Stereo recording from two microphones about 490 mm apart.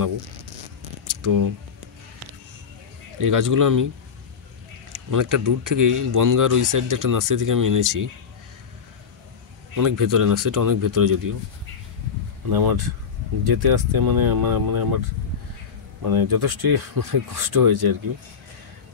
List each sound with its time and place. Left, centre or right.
1.0 s a sound: right
3.2 s speech: right
4.9 s speech: right
9.8 s speech: right
12.4 s speech: right
16.1 s speech: right